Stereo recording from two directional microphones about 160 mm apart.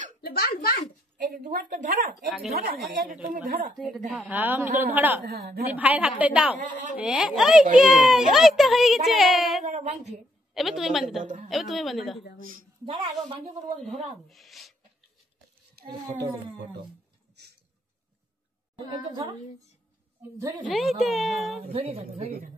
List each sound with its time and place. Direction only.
0.2 s a child's voice: 70° left (ahead or behind)
1.1 s a woman's voice: 60° right (ahead or behind)
2.5 s a woman's voice: 70° right (ahead or behind)
4.3 s a woman's voice: 10° right (ahead or behind)
5.3 s a woman's voice: 75° right (ahead or behind)
5.7 s a woman's voice: 10° right (ahead or behind)
9.7 s a woman's voice: 45° right (ahead or behind)
10.5 s a child's voice: centre (ahead or behind)
12.8 s speech: 35° right (ahead or behind)
13.7 s a child's voice: centre (ahead or behind)
17.4 s a sound: 90° right
18.9 s a woman's voice: 30° right (ahead or behind)
20.6 s a child's voice: centre (ahead or behind)
21.7 s speech: 35° right (ahead or behind)